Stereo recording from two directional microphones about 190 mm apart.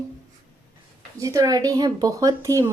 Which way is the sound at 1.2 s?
15° right (ahead or behind).